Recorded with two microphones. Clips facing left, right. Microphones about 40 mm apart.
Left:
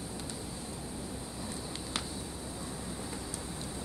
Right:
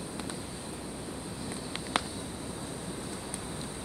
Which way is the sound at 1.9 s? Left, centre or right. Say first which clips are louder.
Right 8 dB; right.